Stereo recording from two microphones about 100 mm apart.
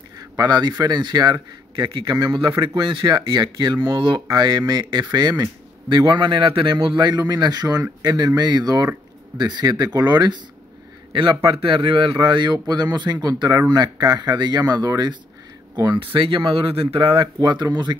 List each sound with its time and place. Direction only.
0.4 s a man's voice: 45° right (ahead or behind)
16.0 s a man's voice: 55° right (ahead or behind)